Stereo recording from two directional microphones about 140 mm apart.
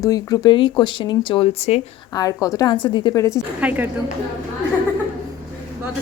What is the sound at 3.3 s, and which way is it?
Speech, 10° right (ahead or behind).